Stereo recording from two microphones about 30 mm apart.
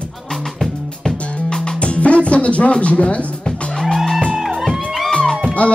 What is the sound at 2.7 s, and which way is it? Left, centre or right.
Speech, left.